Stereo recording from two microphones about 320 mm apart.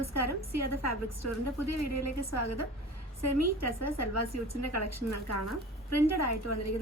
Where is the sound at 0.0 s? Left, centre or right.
Left.